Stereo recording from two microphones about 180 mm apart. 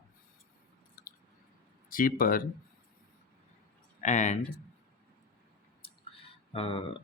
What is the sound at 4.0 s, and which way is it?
Speech, 40° left (ahead or behind).